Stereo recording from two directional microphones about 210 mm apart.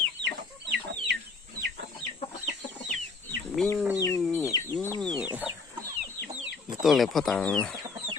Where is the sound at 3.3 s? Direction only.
5° left (ahead or behind).